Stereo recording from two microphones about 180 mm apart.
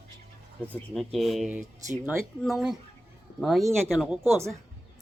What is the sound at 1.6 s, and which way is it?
Speech, 40° right (ahead or behind).